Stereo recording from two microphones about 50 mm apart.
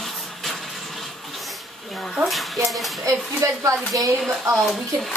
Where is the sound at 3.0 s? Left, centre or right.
Right.